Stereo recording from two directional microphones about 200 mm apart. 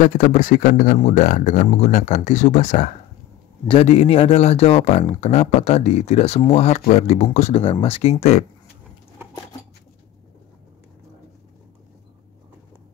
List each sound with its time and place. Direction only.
0.0 s speech: 40° left (ahead or behind)